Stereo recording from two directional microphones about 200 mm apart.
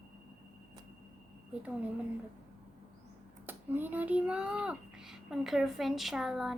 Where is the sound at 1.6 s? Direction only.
5° right (ahead or behind).